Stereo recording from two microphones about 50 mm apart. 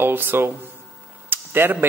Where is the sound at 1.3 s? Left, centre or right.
Right.